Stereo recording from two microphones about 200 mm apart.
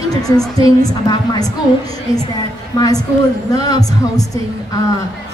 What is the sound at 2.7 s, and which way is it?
A woman's voice, 20° left (ahead or behind).